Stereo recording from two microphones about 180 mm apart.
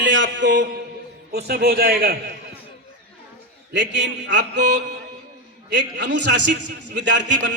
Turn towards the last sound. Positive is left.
turn(degrees=-85)